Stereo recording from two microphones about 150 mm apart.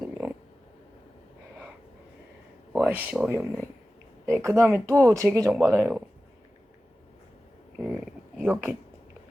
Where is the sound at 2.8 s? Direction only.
10° right (ahead or behind).